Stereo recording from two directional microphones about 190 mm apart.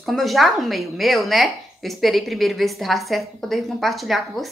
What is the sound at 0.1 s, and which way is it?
A woman's voice, centre (ahead or behind).